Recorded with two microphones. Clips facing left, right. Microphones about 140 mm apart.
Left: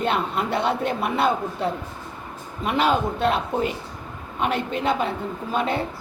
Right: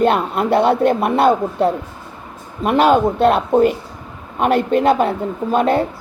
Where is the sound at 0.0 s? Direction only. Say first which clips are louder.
Right 8 dB; 50° right (ahead or behind).